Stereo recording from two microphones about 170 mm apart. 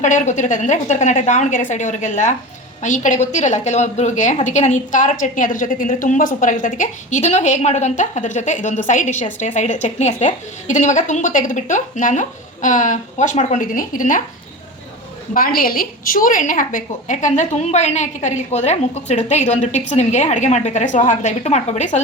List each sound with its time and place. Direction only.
0.0 s a woman's voice: 45° left (ahead or behind)
15.3 s a woman's voice: 55° left (ahead or behind)